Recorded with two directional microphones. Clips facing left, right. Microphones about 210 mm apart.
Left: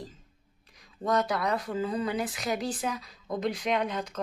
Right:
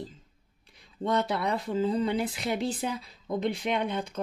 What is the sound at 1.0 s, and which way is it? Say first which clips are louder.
Speech: even; 25° right (ahead or behind).